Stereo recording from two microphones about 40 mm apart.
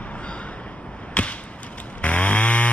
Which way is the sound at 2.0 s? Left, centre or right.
Left.